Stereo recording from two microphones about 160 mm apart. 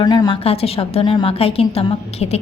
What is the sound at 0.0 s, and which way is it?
Speech, 25° left (ahead or behind).